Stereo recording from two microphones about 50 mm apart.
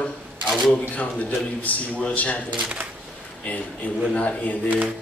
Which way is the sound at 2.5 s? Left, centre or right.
Centre.